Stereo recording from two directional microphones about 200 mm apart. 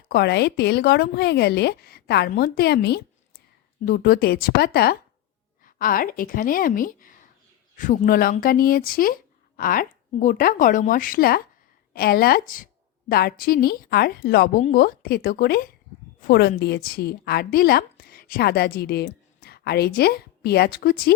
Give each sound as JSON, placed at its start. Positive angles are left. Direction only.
{"t": 0.1, "sound": "a woman's voice", "side_deg": 55}